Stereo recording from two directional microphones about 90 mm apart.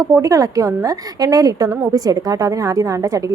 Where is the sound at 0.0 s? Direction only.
35° right (ahead or behind).